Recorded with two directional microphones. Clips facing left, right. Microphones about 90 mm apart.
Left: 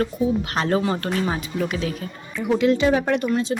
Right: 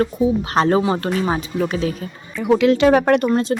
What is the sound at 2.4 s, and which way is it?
Speech, 90° right.